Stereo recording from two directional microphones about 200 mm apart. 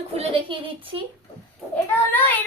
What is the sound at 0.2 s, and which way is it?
Speech, 30° right (ahead or behind).